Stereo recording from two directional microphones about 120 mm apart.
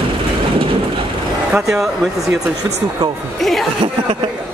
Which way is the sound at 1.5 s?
5° right (ahead or behind).